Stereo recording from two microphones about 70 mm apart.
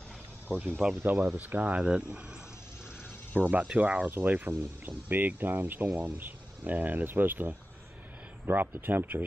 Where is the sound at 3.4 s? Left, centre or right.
Right.